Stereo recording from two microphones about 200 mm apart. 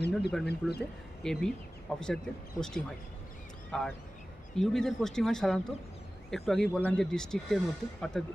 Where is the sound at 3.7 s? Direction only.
5° left (ahead or behind).